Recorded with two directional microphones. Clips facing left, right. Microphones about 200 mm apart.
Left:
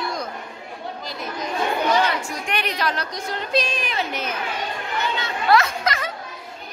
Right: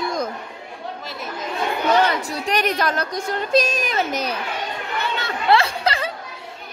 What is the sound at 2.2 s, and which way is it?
A woman's voice, 35° right (ahead or behind).